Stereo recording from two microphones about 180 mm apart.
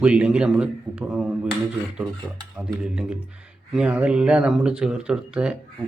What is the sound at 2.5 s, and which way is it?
Speech, 5° right (ahead or behind).